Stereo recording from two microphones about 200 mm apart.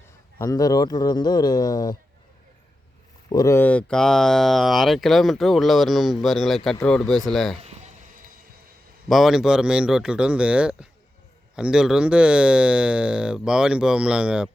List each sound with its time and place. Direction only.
0.3 s speech: 15° left (ahead or behind)
3.2 s speech: 20° left (ahead or behind); by 7.6 s centre (ahead or behind)
9.0 s speech: centre (ahead or behind)